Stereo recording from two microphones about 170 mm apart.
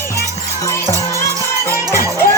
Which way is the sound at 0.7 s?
15° left (ahead or behind).